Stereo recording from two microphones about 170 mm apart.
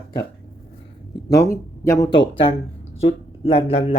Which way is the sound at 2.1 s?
30° left (ahead or behind).